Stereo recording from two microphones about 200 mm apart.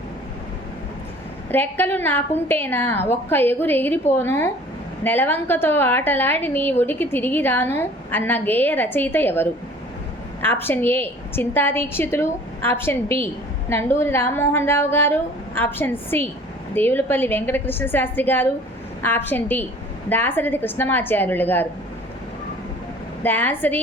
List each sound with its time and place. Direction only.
1.5 s a woman's voice: 10° left (ahead or behind)
23.2 s a woman's voice: 10° left (ahead or behind)